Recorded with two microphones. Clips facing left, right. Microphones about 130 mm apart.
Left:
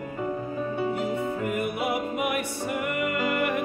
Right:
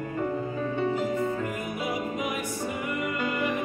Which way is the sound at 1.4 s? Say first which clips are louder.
Left 4 dB; 65° left (ahead or behind).